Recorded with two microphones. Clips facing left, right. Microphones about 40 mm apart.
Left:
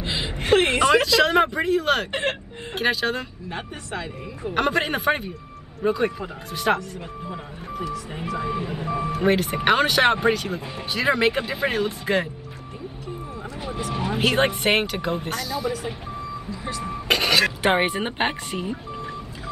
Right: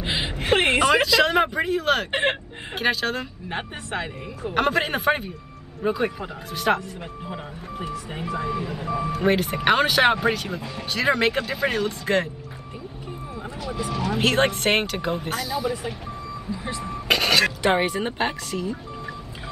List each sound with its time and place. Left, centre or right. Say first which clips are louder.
0.0 s a sound: right 1 dB; right
1.0 s speech: left 1 dB; centre
3.4 s speech: right 2 dB; right
4.5 s speech: even; centre
7.8 s speech: left 1 dB; centre
8.5 s speech: even; centre
13.6 s vehicle: right 1 dB; centre
13.9 s speech: right 1 dB; left
14.2 s speech: even; centre
17.1 s a sound: even; centre
17.6 s speech: left 1 dB; left